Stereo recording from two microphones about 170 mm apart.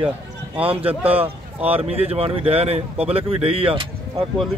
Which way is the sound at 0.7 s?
35° right (ahead or behind).